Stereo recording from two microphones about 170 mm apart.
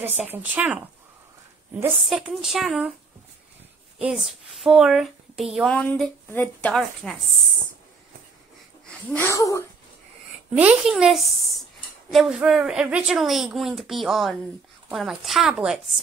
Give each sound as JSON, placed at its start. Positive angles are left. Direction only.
{"t": 0.2, "sound": "speech", "side_deg": -10}
{"t": 2.0, "sound": "a woman's voice", "side_deg": 0}
{"t": 4.0, "sound": "a woman's voice", "side_deg": 0}
{"t": 8.8, "sound": "speech", "side_deg": 10}
{"t": 10.6, "sound": "a woman's voice", "side_deg": -5}